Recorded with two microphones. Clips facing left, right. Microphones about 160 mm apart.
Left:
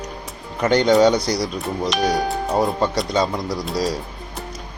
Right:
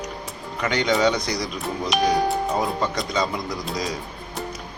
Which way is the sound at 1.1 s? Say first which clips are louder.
Left 5 dB; 35° left (ahead or behind).